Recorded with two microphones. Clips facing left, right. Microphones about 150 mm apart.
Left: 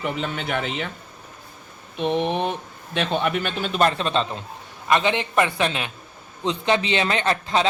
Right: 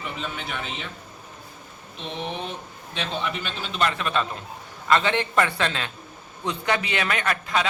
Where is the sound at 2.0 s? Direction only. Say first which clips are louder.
Left 10 dB; 60° left (ahead or behind).